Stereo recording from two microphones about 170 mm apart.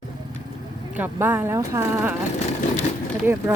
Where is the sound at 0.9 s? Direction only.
10° right (ahead or behind).